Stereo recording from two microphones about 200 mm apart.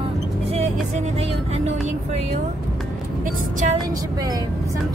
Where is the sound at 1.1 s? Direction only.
30° right (ahead or behind).